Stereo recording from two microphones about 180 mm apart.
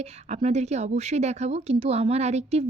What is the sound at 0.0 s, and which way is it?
A woman's voice, 40° right (ahead or behind).